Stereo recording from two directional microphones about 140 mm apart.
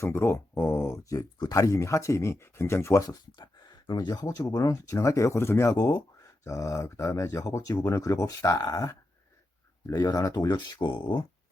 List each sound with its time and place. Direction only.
0.0 s speech: 20° left (ahead or behind); by 11.3 s 35° left (ahead or behind)